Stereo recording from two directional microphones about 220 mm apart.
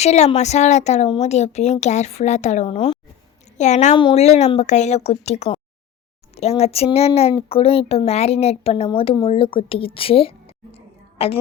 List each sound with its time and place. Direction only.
0.0 s a woman's voice: 30° left (ahead or behind)